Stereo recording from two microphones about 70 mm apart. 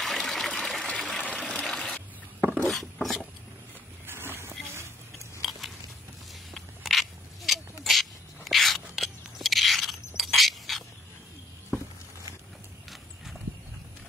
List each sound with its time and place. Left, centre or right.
0.0 s water: centre
2.5 s wood: centre
4.0 s a sound: right
5.4 s biting: centre
6.5 s a sound: centre
12.9 s horse: centre